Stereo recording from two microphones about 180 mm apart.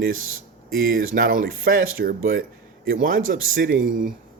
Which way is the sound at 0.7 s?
90° right.